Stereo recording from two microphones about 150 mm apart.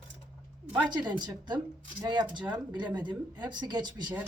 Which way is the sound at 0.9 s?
30° right (ahead or behind).